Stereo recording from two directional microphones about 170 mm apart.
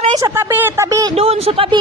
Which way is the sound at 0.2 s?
15° right (ahead or behind).